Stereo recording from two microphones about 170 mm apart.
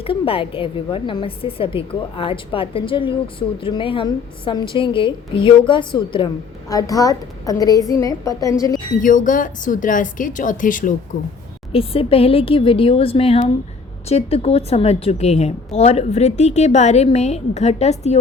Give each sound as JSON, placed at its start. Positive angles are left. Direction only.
{"t": 0.0, "sound": "a woman's voice", "side_deg": 30}
{"t": 9.0, "sound": "a woman's voice", "side_deg": 50}
{"t": 11.7, "sound": "a woman's voice", "side_deg": 35}